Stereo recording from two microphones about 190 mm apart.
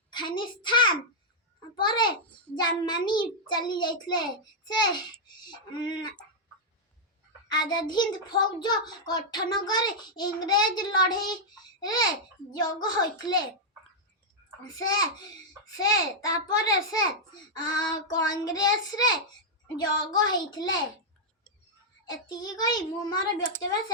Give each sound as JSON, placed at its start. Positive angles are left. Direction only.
{"t": 0.1, "sound": "a child's voice", "side_deg": 25}
{"t": 7.4, "sound": "a child's voice", "side_deg": 20}
{"t": 14.8, "sound": "a child's voice", "side_deg": 20}
{"t": 22.1, "sound": "a child's voice", "side_deg": 20}